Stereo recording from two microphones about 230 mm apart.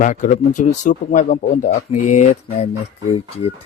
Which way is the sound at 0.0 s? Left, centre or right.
Left.